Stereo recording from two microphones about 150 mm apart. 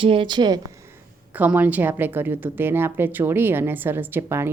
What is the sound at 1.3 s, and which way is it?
A woman's voice, 10° right (ahead or behind).